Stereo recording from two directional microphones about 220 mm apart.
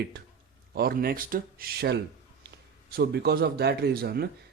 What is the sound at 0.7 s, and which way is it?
A man's voice, 40° right (ahead or behind).